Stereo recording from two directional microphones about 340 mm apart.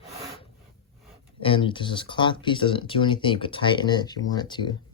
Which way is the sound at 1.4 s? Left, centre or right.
Centre.